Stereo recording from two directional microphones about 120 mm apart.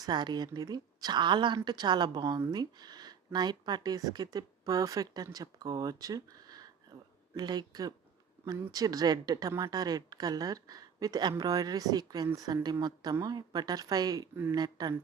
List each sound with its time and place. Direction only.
0.0 s a woman's voice: 35° right (ahead or behind)